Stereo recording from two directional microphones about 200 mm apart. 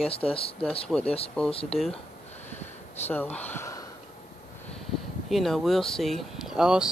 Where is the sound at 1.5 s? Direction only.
30° left (ahead or behind).